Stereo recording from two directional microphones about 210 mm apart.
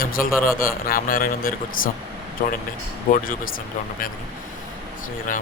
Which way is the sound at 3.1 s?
40° left (ahead or behind).